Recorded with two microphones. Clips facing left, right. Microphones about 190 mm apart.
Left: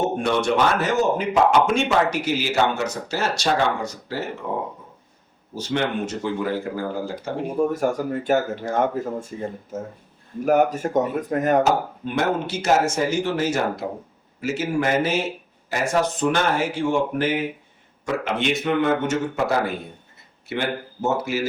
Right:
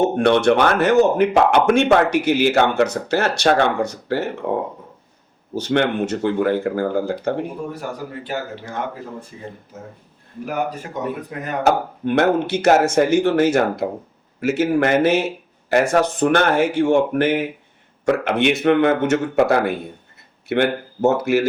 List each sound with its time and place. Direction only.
0.2 s speech: 65° right (ahead or behind)
7.7 s speech: 45° left (ahead or behind)
11.6 s speech: 65° right (ahead or behind)